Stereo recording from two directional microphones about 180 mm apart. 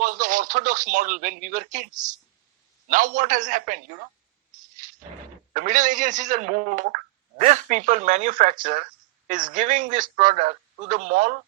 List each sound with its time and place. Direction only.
0.0 s speech: 45° right (ahead or behind)
2.9 s speech: 45° right (ahead or behind)
5.5 s speech: 45° right (ahead or behind)